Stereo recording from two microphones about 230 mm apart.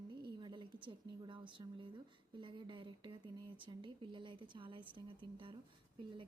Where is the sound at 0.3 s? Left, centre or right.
Centre.